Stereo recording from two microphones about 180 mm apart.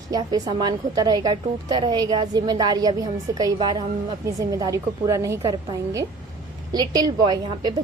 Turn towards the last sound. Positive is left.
turn(degrees=-25)  # may be behind; listen again after turning